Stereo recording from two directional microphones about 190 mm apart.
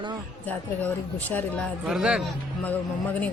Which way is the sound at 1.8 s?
5° right (ahead or behind).